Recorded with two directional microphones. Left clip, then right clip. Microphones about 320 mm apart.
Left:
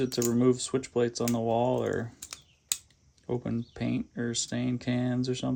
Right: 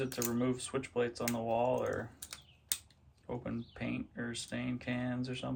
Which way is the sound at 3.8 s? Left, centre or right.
Centre.